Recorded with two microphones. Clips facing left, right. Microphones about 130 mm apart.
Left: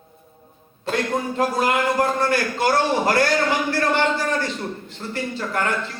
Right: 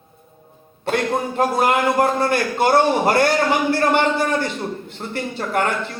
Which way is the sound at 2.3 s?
25° right (ahead or behind).